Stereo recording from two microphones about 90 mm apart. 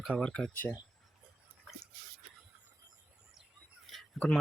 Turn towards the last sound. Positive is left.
turn(degrees=15)  # may be behind; listen again after turning